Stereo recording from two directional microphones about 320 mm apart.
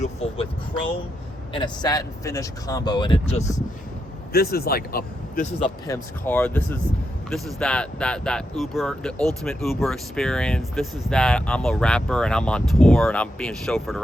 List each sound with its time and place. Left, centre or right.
0.0 s vehicle: centre
1.5 s speech: centre
5.9 s speech: centre